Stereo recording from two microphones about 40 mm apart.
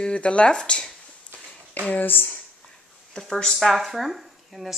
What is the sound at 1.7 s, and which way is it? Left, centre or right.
Speech, left.